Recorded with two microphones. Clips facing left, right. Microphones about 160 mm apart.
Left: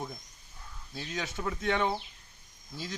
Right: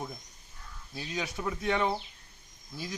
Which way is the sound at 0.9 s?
20° right (ahead or behind).